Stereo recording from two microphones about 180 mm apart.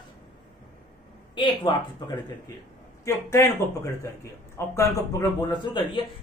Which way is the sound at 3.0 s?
15° left (ahead or behind).